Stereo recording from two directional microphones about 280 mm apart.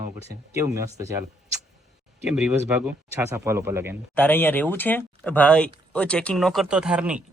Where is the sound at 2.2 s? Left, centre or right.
Centre.